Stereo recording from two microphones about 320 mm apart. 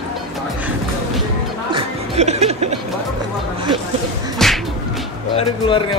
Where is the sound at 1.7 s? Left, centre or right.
Centre.